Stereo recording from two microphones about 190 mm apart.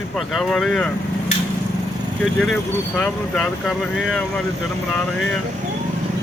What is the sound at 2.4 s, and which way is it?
Speech, centre (ahead or behind).